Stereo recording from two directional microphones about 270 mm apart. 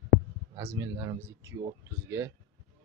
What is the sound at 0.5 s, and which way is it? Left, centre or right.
Speech, centre.